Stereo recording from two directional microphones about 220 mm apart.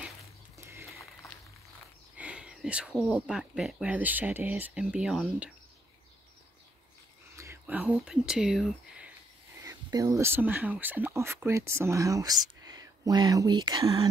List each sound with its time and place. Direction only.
0.6 s a sound: 10° right (ahead or behind)
2.1 s speech: 5° right (ahead or behind)
7.3 s speech: 10° right (ahead or behind)
9.6 s speech: 15° right (ahead or behind)